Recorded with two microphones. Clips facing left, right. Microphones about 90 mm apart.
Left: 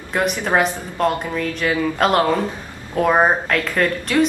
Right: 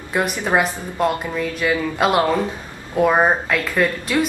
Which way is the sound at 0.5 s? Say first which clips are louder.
Left 1 dB; 5° right (ahead or behind).